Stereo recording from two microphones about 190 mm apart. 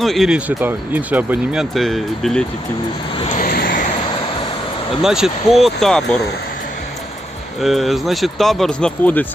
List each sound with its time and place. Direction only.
0.0 s speech: centre (ahead or behind)
3.2 s vehicle: 30° left (ahead or behind)
3.4 s vehicle: 50° left (ahead or behind)
5.0 s speech: centre (ahead or behind)
7.6 s speech: centre (ahead or behind)